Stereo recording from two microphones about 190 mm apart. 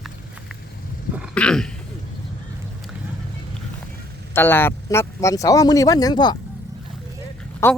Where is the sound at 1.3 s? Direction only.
5° left (ahead or behind).